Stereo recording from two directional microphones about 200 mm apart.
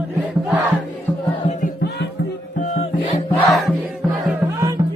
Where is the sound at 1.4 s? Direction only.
45° left (ahead or behind).